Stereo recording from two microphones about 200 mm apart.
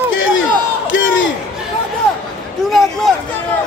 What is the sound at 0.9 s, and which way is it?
Crowd, 70° left (ahead or behind).